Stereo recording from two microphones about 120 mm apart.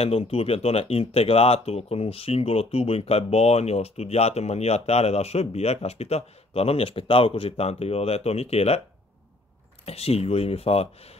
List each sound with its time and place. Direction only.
0.0 s speech: 55° left (ahead or behind)
9.8 s speech: 55° left (ahead or behind)